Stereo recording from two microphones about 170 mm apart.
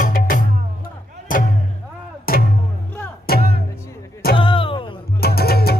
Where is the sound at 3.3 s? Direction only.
65° left (ahead or behind).